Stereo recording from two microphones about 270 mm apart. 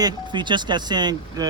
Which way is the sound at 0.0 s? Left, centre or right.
Centre.